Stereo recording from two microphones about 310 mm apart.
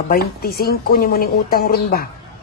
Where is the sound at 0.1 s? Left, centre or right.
Left.